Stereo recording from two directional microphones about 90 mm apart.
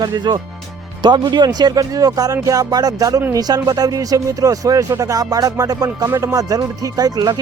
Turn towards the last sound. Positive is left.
turn(degrees=-45)  # may be behind; listen again after turning